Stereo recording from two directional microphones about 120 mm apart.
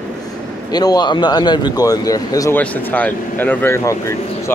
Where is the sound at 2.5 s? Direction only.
15° left (ahead or behind).